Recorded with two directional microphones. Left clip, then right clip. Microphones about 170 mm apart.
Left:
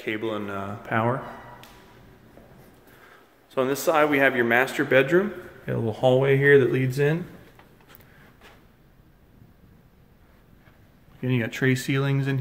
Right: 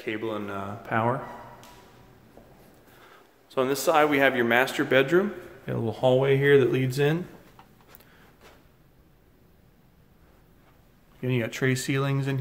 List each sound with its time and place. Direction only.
0.0 s speech: 5° left (ahead or behind)
3.0 s speech: centre (ahead or behind)
11.1 s speech: centre (ahead or behind)